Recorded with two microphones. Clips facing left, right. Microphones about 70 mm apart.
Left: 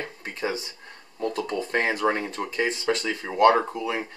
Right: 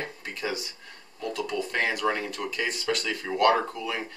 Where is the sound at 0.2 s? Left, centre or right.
Left.